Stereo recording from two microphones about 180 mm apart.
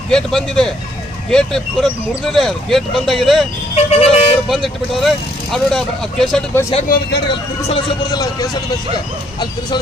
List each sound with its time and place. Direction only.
0.1 s speech: 5° left (ahead or behind)
3.8 s vehicle: 35° left (ahead or behind)
4.4 s speech: centre (ahead or behind)
6.8 s speech: 60° left (ahead or behind)
7.7 s speech: 25° left (ahead or behind)